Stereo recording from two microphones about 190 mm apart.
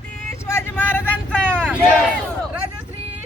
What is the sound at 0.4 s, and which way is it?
Vehicle, 10° left (ahead or behind).